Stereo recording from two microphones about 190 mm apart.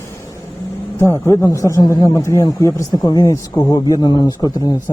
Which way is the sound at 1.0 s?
15° left (ahead or behind).